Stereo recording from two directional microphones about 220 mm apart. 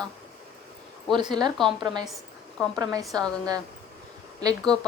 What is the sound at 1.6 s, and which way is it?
Speech, centre (ahead or behind).